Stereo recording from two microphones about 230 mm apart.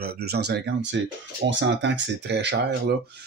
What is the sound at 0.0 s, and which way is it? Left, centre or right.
Speech, right.